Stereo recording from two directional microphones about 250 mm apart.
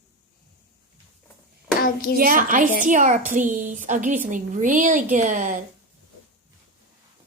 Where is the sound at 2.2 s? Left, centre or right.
Right.